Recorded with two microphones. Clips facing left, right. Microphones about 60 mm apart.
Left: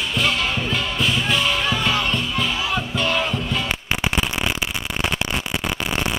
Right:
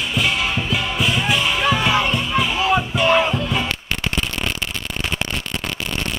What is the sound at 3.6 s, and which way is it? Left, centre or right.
Fireworks, centre.